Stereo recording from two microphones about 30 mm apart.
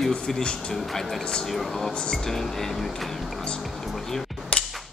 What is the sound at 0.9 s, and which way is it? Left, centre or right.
Speech, centre.